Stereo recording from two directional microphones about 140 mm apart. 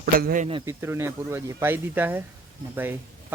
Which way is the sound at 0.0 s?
85° right.